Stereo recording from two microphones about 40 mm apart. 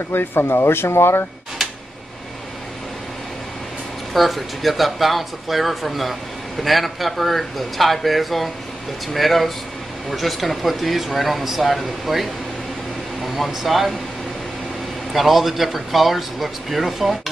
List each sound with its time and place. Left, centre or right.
0.1 s speech: left
4.1 s speech: centre
15.1 s speech: centre